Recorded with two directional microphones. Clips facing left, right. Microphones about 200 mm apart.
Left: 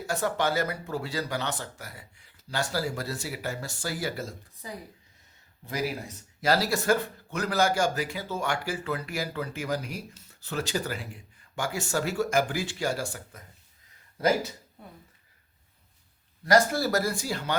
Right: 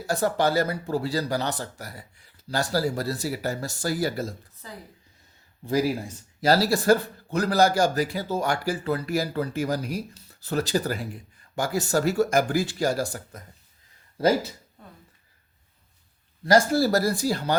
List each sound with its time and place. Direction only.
0.1 s speech: 35° right (ahead or behind)
4.6 s speech: 15° left (ahead or behind)
6.4 s speech: 35° right (ahead or behind)
16.4 s speech: 30° right (ahead or behind)